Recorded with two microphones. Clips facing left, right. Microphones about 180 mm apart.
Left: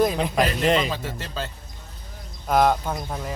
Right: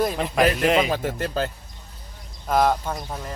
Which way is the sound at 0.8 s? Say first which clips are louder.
Right 5 dB; 55° right (ahead or behind).